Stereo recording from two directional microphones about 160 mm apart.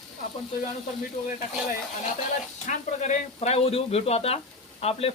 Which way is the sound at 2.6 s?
45° left (ahead or behind).